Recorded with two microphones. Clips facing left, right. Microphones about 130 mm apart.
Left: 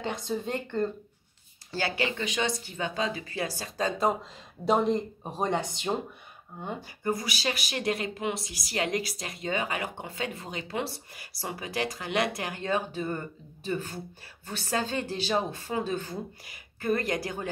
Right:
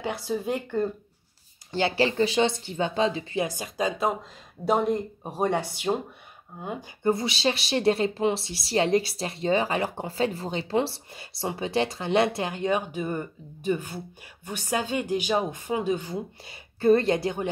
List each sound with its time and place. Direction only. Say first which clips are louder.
0.0 s speech: right 3 dB; 10° right (ahead or behind)
1.7 s speech: right 6 dB; 25° right (ahead or behind)
4.6 s speech: right 1 dB; 5° right (ahead or behind)
7.0 s speech: right 7 dB; 25° right (ahead or behind)
16.4 s a woman's voice: right 10 dB; 30° right (ahead or behind)